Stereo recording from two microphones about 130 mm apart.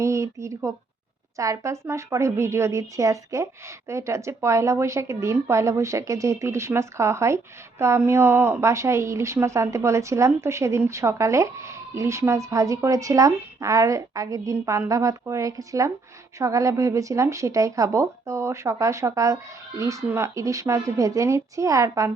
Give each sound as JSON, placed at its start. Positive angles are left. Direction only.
{"t": 0.0, "sound": "a woman's voice", "side_deg": -25}